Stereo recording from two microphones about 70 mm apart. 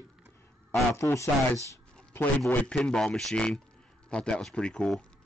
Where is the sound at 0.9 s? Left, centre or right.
Left.